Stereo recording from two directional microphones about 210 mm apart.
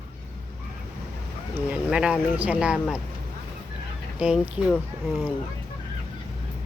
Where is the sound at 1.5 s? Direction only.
5° right (ahead or behind).